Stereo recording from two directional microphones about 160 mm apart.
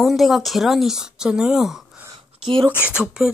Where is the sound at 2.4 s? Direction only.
30° right (ahead or behind).